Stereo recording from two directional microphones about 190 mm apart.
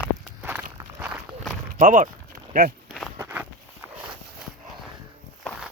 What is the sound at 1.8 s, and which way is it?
Speech, 45° right (ahead or behind).